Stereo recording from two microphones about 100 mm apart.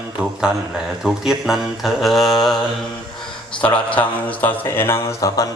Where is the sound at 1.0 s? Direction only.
5° right (ahead or behind).